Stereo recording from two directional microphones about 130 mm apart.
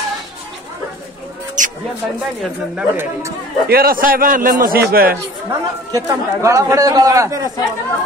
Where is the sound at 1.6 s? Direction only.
75° right (ahead or behind).